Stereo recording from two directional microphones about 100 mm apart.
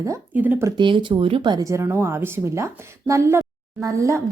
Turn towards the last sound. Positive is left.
turn(degrees=-30)  # may be behind; listen again after turning